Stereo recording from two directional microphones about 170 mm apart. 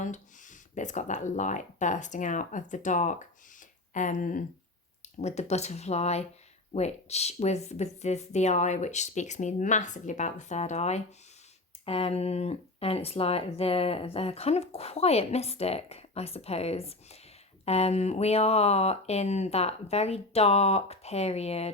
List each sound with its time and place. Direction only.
0.0 s speech: 45° left (ahead or behind)
5.0 s speech: 40° left (ahead or behind)